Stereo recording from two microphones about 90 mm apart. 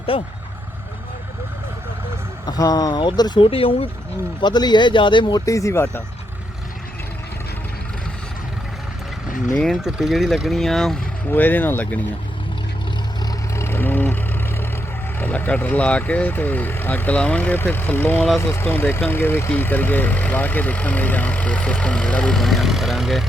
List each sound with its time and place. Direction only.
0.1 s speech: 90° left
2.5 s speech: 45° left (ahead or behind); by 3.8 s 90° left
4.4 s speech: 55° left (ahead or behind)
5.5 s speech: 35° left (ahead or behind)
9.6 s speech: centre (ahead or behind)
11.3 s speech: 20° left (ahead or behind)
13.6 s vehicle: 25° left (ahead or behind)
15.2 s speech: 20° left (ahead or behind); by 23.2 s centre (ahead or behind)